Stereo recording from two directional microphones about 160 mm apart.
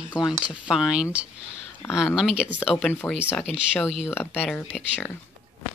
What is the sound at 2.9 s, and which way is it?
Speech, 10° left (ahead or behind).